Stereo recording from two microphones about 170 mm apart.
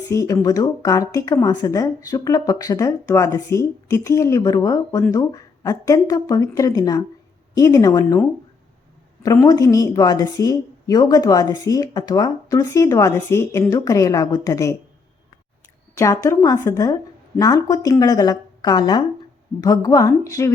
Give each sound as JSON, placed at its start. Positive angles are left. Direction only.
{"t": 0.1, "sound": "speech", "side_deg": 20}
{"t": 9.2, "sound": "speech", "side_deg": 20}
{"t": 16.0, "sound": "speech", "side_deg": 15}